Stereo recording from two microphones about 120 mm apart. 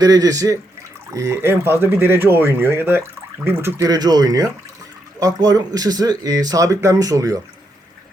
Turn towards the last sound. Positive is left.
turn(degrees=-30)  # may be behind; listen again after turning